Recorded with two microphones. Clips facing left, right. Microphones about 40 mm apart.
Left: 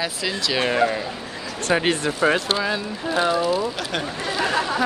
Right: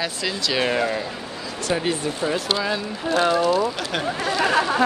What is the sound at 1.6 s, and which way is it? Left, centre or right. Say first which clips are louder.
Speech: left 3 dB; left.